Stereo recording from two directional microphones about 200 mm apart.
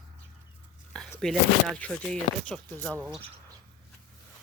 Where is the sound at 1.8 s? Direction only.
5° left (ahead or behind).